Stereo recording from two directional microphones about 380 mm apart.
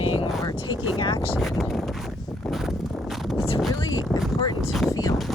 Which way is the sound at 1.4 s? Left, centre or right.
Centre.